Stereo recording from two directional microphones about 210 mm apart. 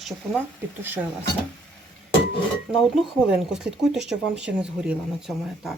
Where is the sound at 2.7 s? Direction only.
Centre (ahead or behind).